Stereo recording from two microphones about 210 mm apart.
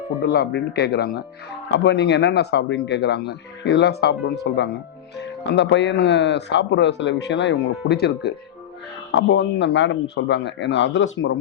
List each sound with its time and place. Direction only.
0.3 s speech: 50° left (ahead or behind)